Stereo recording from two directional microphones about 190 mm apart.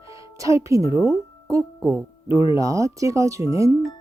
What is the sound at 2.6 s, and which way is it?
Speech, 15° right (ahead or behind).